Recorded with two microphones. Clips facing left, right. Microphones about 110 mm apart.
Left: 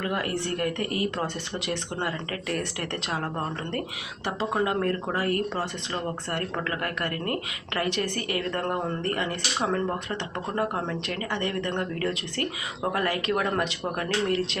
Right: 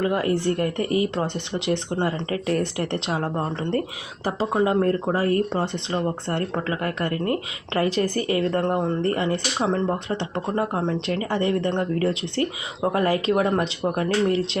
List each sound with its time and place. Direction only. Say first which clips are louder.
0.0 s speech: right 7 dB; 25° right (ahead or behind)
4.5 s speech: right 6 dB; 25° right (ahead or behind)